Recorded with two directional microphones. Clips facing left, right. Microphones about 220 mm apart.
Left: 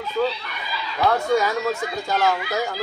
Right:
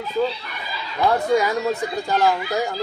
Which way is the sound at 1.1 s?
15° right (ahead or behind).